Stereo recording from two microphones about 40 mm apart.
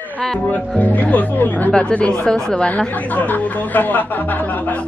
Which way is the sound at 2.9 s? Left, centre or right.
Left.